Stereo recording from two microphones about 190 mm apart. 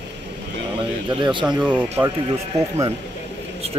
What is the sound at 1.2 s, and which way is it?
Speech, 25° right (ahead or behind).